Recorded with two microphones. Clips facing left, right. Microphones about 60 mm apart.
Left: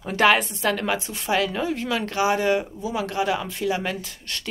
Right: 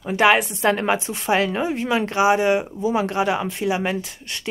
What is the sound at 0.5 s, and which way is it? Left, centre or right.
A woman's voice, right.